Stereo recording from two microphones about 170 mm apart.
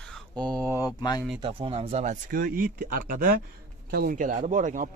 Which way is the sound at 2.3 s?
55° right (ahead or behind).